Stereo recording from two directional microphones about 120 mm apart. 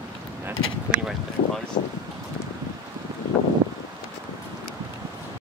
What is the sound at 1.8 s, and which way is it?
Speech, 90° left.